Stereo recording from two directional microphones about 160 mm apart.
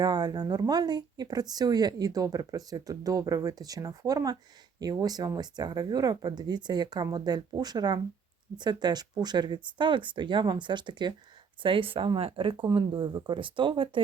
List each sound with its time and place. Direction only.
0.0 s speech: 25° right (ahead or behind)